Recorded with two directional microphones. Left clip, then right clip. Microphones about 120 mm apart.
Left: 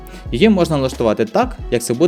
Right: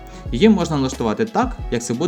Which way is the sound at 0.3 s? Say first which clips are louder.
Left 3 dB; 50° left (ahead or behind).